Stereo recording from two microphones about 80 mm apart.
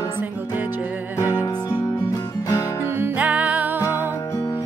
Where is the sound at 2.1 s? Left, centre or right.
Left.